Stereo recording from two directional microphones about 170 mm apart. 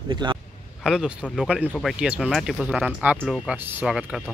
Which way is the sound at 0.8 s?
5° right (ahead or behind).